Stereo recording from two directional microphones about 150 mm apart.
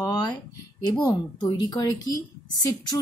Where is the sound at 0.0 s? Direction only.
25° left (ahead or behind).